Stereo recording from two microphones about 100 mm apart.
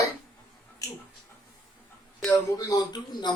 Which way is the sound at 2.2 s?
Centre (ahead or behind).